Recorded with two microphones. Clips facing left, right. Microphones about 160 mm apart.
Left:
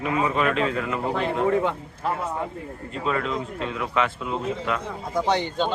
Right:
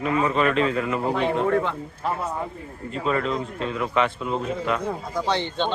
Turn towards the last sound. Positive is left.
turn(degrees=10)  # may be behind; listen again after turning